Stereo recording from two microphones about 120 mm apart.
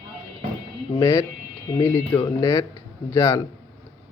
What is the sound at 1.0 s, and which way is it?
Speech, 20° left (ahead or behind).